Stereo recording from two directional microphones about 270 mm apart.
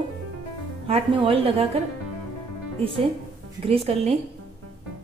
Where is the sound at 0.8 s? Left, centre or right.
Right.